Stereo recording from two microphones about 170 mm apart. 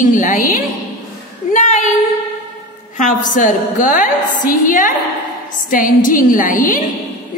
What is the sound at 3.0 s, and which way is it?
A woman's voice, 50° left (ahead or behind).